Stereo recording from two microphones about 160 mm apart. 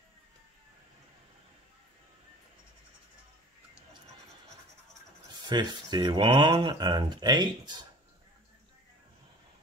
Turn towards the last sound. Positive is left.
turn(degrees=-25)  # may be behind; listen again after turning